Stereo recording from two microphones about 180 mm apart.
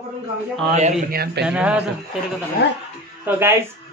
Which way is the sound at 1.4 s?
5° right (ahead or behind).